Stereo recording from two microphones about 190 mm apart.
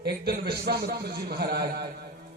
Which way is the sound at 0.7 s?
60° right (ahead or behind).